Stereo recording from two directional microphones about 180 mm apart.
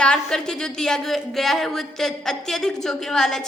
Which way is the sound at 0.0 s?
5° left (ahead or behind).